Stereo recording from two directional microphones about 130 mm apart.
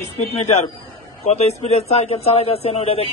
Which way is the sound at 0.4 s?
60° left (ahead or behind).